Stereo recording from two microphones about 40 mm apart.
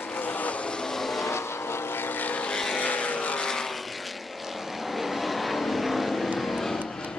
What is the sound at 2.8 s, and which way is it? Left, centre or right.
Vehicle, left.